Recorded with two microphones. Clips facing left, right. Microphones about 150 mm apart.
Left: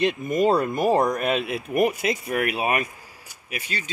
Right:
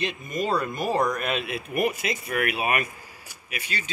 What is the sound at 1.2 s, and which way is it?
Speech, 40° left (ahead or behind).